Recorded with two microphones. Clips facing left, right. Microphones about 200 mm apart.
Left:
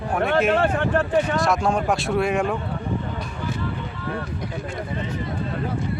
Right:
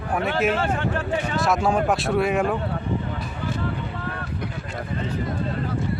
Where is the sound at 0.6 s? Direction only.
55° left (ahead or behind).